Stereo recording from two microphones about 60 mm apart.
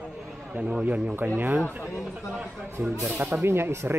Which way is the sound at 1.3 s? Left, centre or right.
Right.